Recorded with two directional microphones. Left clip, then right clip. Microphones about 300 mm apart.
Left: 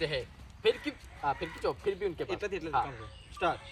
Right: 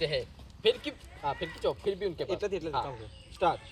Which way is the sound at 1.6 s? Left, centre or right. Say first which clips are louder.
Right 3 dB; centre.